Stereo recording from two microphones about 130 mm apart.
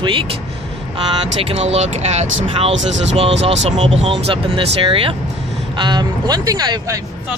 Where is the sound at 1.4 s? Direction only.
50° right (ahead or behind); by 6.9 s 30° right (ahead or behind).